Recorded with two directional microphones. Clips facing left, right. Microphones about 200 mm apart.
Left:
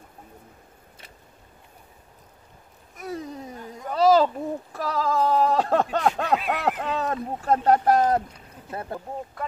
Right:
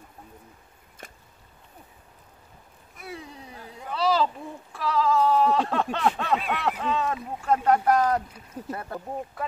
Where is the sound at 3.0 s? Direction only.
40° left (ahead or behind).